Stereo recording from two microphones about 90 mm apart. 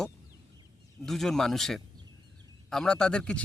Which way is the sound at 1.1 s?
5° left (ahead or behind).